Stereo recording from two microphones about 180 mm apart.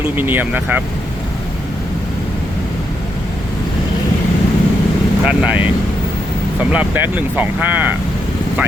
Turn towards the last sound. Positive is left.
turn(degrees=-10)  # may be behind; listen again after turning